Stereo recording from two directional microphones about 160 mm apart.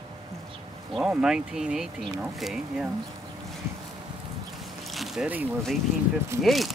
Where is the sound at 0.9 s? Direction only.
5° right (ahead or behind).